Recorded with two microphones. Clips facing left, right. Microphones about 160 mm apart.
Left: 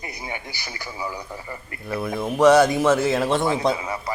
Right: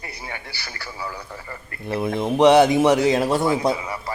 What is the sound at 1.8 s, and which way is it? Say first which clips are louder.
Speech: right 3 dB; 25° right (ahead or behind).